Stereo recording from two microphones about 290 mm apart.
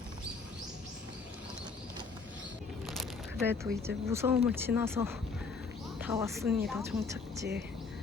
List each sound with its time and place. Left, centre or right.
2.8 s speech: centre